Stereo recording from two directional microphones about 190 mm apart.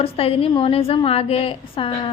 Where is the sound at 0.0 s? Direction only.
30° left (ahead or behind).